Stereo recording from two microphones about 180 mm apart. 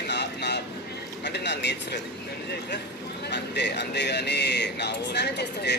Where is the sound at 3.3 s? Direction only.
70° left (ahead or behind).